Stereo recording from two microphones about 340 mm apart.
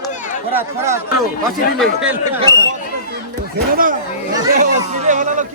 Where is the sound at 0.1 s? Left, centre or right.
Left.